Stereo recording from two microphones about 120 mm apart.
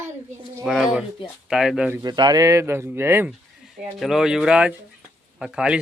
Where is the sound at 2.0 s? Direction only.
35° right (ahead or behind); by 3.3 s 20° right (ahead or behind).